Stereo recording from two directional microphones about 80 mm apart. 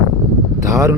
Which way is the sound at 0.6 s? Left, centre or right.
Right.